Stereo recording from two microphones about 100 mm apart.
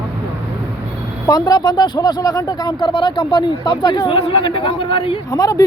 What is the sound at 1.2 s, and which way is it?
Speech, 45° left (ahead or behind).